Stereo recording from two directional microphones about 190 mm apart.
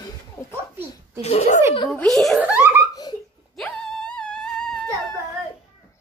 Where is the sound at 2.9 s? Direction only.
20° left (ahead or behind).